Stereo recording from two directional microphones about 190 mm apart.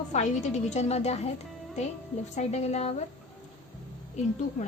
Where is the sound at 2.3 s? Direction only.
35° left (ahead or behind).